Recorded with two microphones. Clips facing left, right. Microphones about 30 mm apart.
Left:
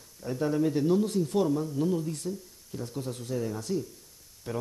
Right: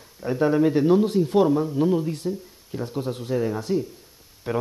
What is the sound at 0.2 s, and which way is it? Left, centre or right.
Speech, right.